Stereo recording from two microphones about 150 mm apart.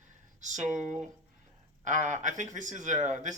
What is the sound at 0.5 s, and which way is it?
Speech, 55° right (ahead or behind).